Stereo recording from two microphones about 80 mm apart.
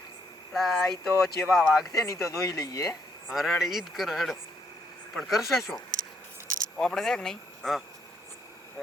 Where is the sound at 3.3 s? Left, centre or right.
Centre.